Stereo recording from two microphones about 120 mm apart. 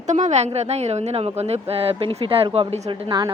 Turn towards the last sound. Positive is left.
turn(degrees=-40)  # may be behind; listen again after turning